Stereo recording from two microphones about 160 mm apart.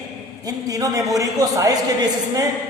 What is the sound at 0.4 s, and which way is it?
A woman's voice, 20° right (ahead or behind).